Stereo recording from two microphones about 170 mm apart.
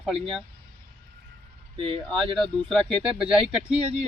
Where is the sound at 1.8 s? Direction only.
30° right (ahead or behind).